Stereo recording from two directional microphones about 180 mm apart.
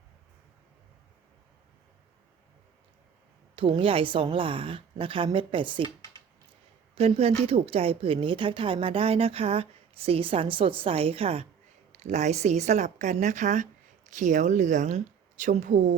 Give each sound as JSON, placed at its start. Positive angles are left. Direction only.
{"t": 3.5, "sound": "a woman's voice", "side_deg": -30}
{"t": 6.9, "sound": "a woman's voice", "side_deg": -35}